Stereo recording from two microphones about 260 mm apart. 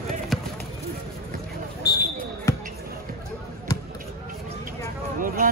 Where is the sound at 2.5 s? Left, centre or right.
Centre.